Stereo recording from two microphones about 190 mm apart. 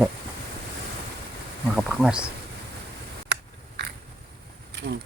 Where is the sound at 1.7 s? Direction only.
5° right (ahead or behind).